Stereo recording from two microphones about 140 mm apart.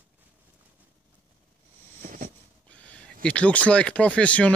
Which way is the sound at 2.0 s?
65° right (ahead or behind).